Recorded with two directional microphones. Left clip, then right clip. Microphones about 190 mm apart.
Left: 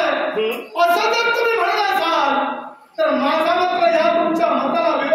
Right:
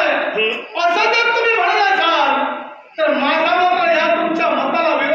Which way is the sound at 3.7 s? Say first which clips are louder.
Even; 25° left (ahead or behind).